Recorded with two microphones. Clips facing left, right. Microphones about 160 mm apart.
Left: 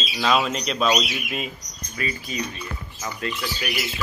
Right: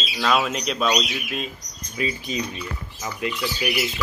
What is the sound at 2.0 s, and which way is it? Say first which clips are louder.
Speech: right 3 dB; 20° right (ahead or behind).